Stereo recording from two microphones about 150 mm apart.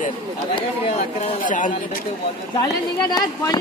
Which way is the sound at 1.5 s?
60° left (ahead or behind).